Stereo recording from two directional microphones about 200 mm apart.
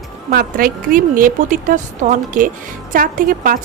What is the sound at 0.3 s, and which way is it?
A woman's voice, 50° right (ahead or behind).